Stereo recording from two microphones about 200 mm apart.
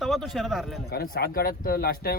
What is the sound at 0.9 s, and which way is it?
Speech, 50° left (ahead or behind).